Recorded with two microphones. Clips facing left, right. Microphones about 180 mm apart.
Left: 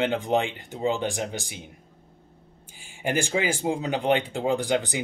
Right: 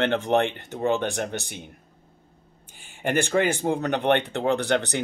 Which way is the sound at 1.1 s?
60° right (ahead or behind).